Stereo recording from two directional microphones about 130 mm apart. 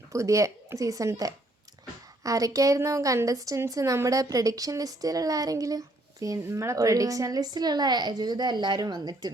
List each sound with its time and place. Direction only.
0.1 s a woman's voice: 25° right (ahead or behind)